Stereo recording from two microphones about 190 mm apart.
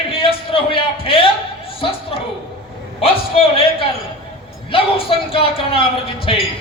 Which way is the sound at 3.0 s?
30° left (ahead or behind).